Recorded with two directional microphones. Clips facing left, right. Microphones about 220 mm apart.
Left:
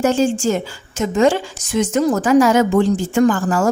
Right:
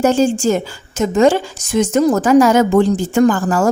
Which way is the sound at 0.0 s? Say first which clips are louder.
Right 2 dB; 40° right (ahead or behind).